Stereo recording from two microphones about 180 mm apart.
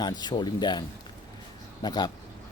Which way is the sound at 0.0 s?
25° left (ahead or behind).